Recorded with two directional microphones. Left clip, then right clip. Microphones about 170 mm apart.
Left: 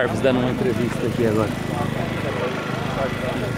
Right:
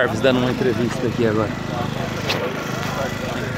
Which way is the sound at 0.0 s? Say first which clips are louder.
Right 2 dB; 20° right (ahead or behind).